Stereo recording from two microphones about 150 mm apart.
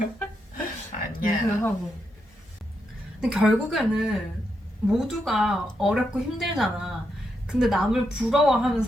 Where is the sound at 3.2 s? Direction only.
5° right (ahead or behind).